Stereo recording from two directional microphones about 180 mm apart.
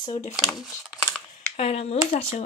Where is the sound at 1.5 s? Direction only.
35° left (ahead or behind).